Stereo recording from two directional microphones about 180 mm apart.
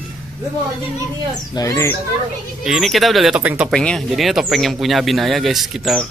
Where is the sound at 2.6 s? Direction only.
5° right (ahead or behind).